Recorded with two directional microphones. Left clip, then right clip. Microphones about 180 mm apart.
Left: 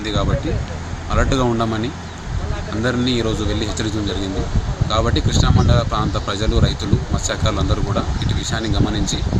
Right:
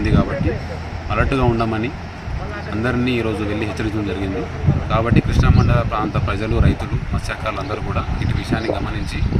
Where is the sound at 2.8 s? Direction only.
5° left (ahead or behind).